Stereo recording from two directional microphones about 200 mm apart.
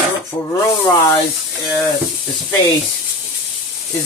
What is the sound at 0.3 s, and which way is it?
Speech, 20° left (ahead or behind).